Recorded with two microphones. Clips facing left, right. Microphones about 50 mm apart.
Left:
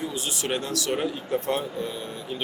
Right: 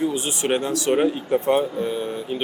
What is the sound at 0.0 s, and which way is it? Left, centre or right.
Speech, right.